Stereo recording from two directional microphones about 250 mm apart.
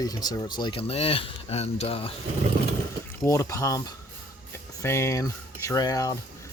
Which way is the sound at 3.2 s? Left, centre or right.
Centre.